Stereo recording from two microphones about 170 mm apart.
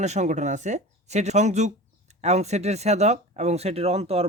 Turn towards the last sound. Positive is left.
turn(degrees=-35)  # may be behind; listen again after turning